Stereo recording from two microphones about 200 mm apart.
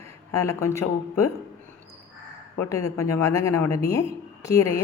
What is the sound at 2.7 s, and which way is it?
A woman's voice, 15° left (ahead or behind).